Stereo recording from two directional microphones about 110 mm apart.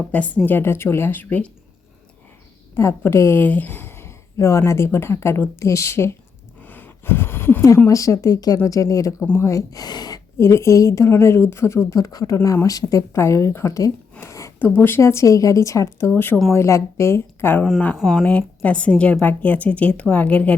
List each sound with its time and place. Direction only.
0.1 s a woman's voice: 10° left (ahead or behind)
2.7 s a woman's voice: 25° left (ahead or behind)
6.6 s a sound: 15° left (ahead or behind)
7.9 s speech: 30° left (ahead or behind)
10.3 s a woman's voice: 25° left (ahead or behind)
17.7 s a woman's voice: 10° left (ahead or behind)
17.9 s speech: centre (ahead or behind)
18.3 s a woman's voice: 10° left (ahead or behind)